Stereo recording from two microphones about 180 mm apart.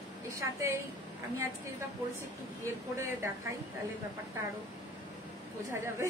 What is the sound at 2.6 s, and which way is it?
Speech, 15° right (ahead or behind).